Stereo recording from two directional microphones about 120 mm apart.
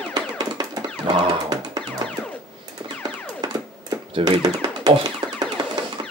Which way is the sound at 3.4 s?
35° right (ahead or behind).